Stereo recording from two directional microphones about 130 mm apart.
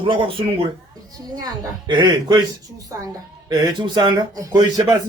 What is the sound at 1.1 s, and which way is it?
A man's voice, 30° right (ahead or behind).